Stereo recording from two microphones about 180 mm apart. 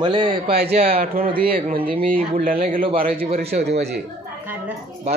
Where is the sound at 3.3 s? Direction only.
35° right (ahead or behind).